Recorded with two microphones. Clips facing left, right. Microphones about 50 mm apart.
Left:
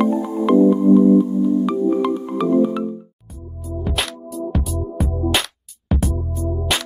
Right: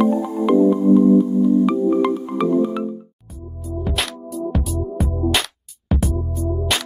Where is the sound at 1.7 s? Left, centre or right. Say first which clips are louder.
Right 1 dB; centre.